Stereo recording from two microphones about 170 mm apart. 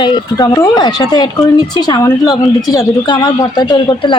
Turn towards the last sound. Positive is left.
turn(degrees=25)  # may be behind; listen again after turning